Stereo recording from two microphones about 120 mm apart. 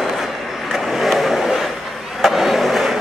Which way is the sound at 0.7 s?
Centre (ahead or behind).